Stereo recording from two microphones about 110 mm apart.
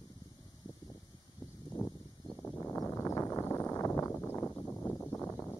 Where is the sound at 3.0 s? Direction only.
25° left (ahead or behind).